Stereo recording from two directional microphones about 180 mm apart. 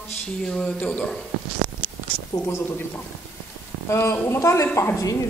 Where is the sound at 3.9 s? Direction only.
15° left (ahead or behind).